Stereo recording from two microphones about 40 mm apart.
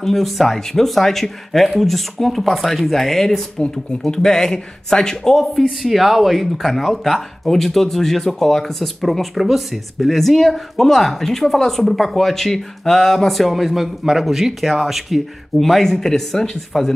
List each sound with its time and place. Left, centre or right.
0.0 s speech: centre
5.8 s speech: centre
15.6 s speech: centre